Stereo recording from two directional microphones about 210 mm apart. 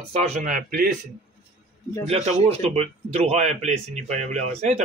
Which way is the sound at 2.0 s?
30° right (ahead or behind).